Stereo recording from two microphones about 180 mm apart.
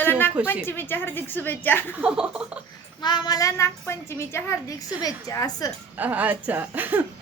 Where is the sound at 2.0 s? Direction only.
5° right (ahead or behind).